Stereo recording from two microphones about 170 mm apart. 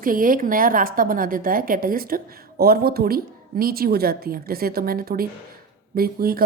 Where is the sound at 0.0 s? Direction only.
55° right (ahead or behind).